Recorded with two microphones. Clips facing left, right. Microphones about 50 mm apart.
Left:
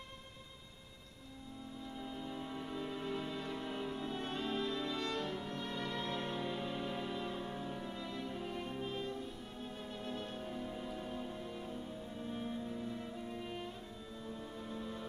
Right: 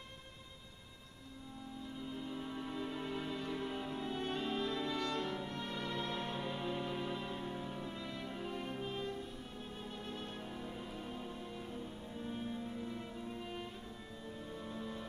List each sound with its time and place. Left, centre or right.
2.0 s music: centre
3.3 s music: right
6.5 s music: centre
8.1 s music: right
10.5 s music: centre